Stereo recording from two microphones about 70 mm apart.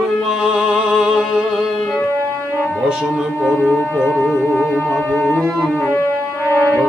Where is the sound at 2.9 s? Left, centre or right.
Centre.